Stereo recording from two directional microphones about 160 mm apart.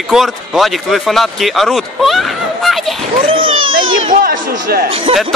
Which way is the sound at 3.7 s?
60° right (ahead or behind).